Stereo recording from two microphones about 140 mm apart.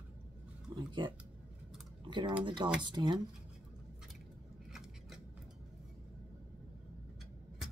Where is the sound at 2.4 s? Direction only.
35° right (ahead or behind).